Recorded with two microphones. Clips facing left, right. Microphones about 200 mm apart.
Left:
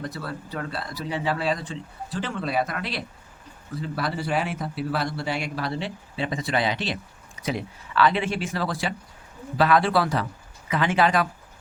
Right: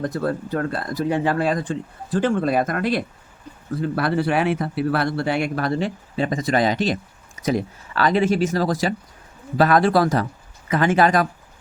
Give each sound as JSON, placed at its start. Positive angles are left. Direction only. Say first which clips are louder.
{"t": 0.0, "sound": "speech", "louder": "right 10 dB", "side_deg": -50}